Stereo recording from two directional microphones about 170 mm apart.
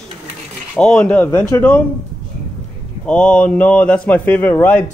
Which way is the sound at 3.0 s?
5° left (ahead or behind).